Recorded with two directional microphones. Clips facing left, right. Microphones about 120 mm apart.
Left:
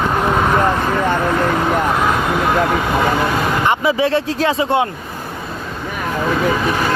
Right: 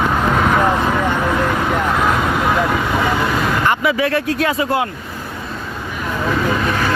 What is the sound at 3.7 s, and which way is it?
Speech, 25° left (ahead or behind).